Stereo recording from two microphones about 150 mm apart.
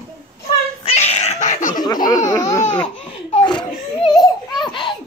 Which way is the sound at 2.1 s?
25° left (ahead or behind).